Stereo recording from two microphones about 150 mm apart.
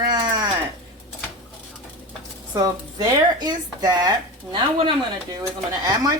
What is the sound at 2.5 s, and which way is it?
Speech, 25° right (ahead or behind).